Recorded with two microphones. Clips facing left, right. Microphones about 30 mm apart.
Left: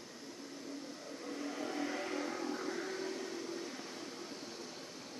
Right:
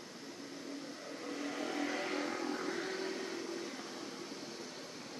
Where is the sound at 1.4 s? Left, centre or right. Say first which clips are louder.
Right 1 dB; right.